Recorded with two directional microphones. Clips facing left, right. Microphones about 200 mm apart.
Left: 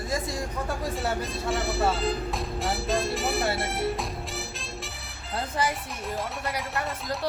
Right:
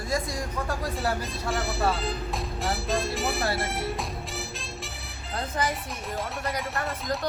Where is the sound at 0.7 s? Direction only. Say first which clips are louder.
Even; centre (ahead or behind).